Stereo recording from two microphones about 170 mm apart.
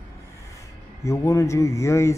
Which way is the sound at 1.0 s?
15° left (ahead or behind).